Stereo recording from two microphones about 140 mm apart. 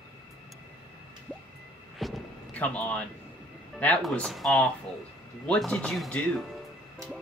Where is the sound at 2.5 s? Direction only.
10° left (ahead or behind).